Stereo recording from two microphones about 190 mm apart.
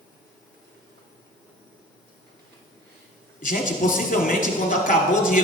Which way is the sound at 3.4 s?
45° left (ahead or behind).